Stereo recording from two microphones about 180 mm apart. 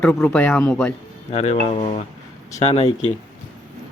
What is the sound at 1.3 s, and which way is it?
Speech, 35° left (ahead or behind).